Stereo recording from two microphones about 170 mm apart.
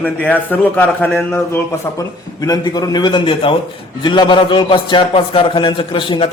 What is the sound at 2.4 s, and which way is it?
A man's voice, 25° left (ahead or behind).